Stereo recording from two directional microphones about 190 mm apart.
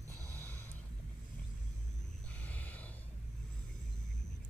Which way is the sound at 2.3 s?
10° left (ahead or behind).